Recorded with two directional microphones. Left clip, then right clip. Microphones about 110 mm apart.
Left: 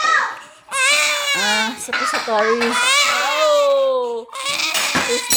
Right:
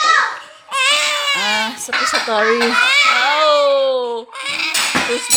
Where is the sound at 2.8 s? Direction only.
30° left (ahead or behind).